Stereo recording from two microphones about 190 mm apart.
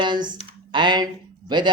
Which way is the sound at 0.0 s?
25° right (ahead or behind).